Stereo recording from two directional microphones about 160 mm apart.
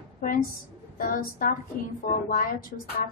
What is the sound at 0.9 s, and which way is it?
A woman's voice, 60° left (ahead or behind).